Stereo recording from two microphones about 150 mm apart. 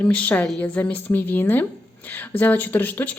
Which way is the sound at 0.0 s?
10° left (ahead or behind).